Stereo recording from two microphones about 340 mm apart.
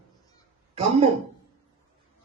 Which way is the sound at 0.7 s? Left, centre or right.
Centre.